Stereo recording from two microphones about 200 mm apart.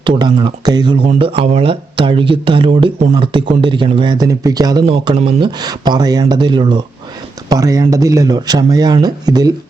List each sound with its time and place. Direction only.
0.0 s speech: 25° right (ahead or behind)